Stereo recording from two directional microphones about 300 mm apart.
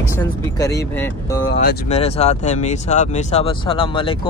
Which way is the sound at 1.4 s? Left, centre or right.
Left.